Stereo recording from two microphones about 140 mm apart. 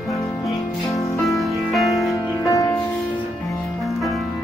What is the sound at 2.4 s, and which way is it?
Music, 25° left (ahead or behind).